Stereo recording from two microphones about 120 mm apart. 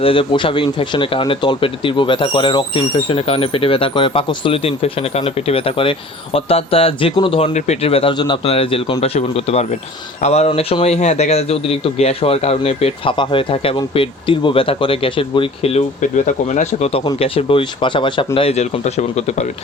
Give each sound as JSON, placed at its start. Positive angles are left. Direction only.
{"t": 0.0, "sound": "speech", "side_deg": 45}
{"t": 7.5, "sound": "a man's voice", "side_deg": 60}
{"t": 8.1, "sound": "speech", "side_deg": 40}
{"t": 8.4, "sound": "a man's voice", "side_deg": 50}
{"t": 10.8, "sound": "a man's voice", "side_deg": 70}
{"t": 16.0, "sound": "speech", "side_deg": 90}
{"t": 17.2, "sound": "speech", "side_deg": 50}
{"t": 18.3, "sound": "a man's voice", "side_deg": 60}